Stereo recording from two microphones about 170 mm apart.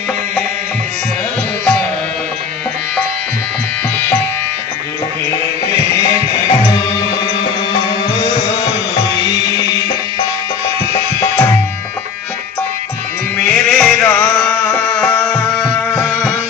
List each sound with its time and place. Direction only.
1.6 s music: 5° left (ahead or behind)
7.1 s music: 25° left (ahead or behind)
10.9 s music: 15° left (ahead or behind)
13.3 s music: 5° left (ahead or behind)